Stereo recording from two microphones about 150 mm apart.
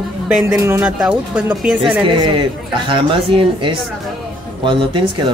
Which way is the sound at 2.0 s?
30° right (ahead or behind).